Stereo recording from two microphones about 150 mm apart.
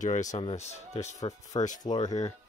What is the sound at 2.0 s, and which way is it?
Speech, 50° left (ahead or behind).